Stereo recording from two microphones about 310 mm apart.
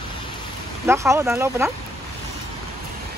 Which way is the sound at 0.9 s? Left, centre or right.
Centre.